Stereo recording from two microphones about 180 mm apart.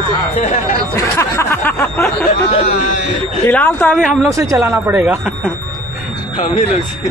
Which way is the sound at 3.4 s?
10° left (ahead or behind).